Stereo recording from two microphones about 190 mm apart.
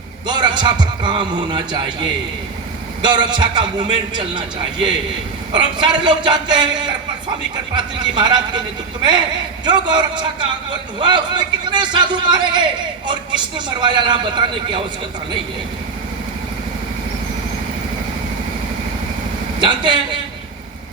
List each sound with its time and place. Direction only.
0.3 s a man's voice: 25° right (ahead or behind)
9.6 s a man's voice: 25° right (ahead or behind)
19.5 s a man's voice: 25° right (ahead or behind)